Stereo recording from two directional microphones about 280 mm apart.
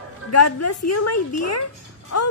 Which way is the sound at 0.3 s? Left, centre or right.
Left.